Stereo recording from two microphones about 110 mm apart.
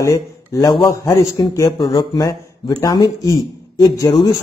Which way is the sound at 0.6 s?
40° left (ahead or behind).